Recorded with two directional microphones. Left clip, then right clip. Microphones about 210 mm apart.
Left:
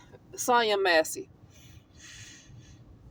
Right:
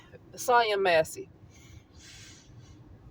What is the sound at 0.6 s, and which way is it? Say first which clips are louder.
Speech: even; 25° left (ahead or behind).